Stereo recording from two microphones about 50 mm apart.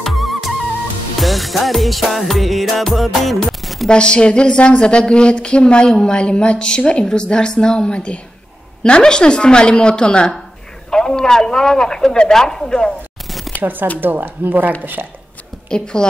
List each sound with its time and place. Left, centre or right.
0.0 s music: centre
3.6 s chopping: centre
3.9 s a woman's voice: centre
13.6 s a woman's voice: right
15.7 s speech: centre